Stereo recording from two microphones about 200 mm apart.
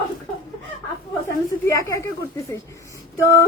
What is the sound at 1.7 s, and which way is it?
Speech, 15° left (ahead or behind).